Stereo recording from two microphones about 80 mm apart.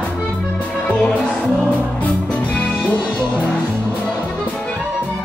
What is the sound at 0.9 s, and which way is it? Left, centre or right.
Music, centre.